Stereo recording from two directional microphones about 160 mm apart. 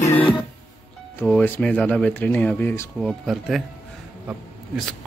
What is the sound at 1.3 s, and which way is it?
Speech, 10° left (ahead or behind).